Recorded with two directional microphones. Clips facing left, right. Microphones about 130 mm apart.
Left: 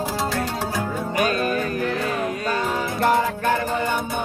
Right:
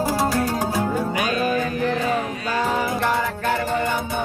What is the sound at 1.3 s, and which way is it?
Music, 45° left (ahead or behind).